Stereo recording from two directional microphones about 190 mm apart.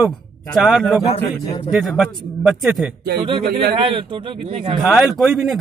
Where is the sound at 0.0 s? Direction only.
Centre (ahead or behind).